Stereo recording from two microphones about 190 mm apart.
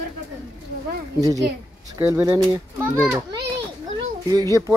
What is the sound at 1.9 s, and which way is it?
Speech, 15° right (ahead or behind).